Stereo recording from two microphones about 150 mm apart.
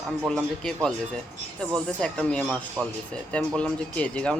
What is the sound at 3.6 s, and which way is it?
Speech, 10° left (ahead or behind).